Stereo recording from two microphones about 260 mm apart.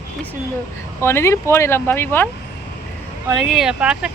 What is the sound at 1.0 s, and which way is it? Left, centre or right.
Speech, centre.